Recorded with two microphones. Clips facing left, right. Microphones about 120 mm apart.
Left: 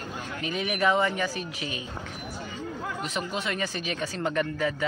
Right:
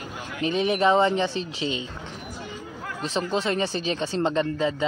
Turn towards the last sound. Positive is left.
turn(degrees=-25)  # may be behind; listen again after turning